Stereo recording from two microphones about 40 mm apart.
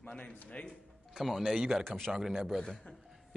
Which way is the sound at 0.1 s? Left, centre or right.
Left.